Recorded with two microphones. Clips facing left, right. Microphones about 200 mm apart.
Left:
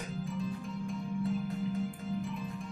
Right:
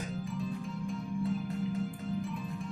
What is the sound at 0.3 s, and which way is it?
Music, centre (ahead or behind).